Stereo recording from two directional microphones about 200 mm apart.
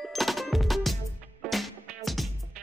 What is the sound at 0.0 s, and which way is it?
Music, centre (ahead or behind).